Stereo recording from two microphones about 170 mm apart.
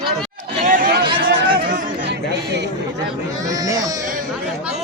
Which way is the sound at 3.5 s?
20° right (ahead or behind).